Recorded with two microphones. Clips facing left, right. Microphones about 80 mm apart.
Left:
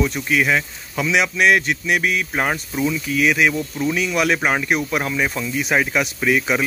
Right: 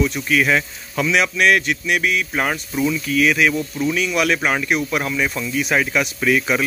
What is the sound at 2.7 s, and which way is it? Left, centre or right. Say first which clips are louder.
Speech: right 4 dB; centre.